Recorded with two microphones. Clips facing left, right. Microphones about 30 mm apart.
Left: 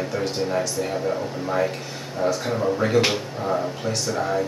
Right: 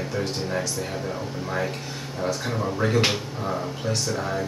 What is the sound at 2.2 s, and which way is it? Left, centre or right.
Speech, centre.